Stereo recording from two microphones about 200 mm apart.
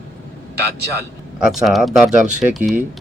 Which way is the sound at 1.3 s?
Centre (ahead or behind).